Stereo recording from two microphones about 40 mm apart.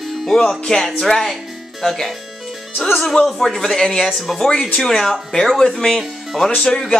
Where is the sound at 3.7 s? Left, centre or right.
Centre.